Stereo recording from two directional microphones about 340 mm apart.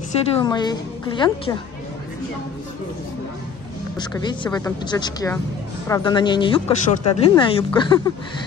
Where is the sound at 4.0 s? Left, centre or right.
Centre.